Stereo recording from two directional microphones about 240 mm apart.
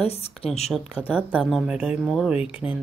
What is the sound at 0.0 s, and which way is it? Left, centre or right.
Speech, left.